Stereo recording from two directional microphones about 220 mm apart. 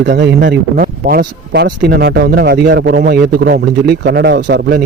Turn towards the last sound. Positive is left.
turn(degrees=-50)  # may be behind; listen again after turning